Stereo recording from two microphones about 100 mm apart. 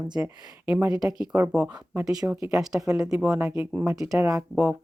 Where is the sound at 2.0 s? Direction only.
35° right (ahead or behind).